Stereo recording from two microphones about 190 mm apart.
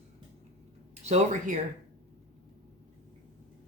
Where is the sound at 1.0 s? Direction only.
35° right (ahead or behind).